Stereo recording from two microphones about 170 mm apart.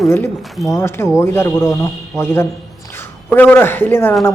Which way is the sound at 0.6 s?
15° left (ahead or behind).